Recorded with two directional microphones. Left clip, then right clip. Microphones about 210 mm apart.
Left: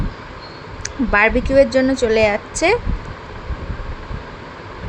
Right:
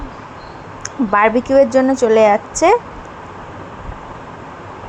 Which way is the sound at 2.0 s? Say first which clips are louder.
Right 6 dB; 5° right (ahead or behind).